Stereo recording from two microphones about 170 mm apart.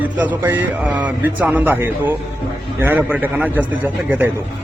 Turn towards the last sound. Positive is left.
turn(degrees=-10)  # may be behind; listen again after turning